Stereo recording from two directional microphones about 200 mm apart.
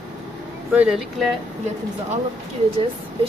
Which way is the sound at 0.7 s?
5° right (ahead or behind).